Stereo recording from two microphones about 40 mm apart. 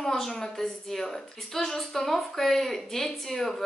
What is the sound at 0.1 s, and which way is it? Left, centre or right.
A woman's voice, centre.